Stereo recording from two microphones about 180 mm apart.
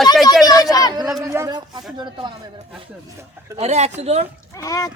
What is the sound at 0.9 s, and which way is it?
Speech, 20° right (ahead or behind).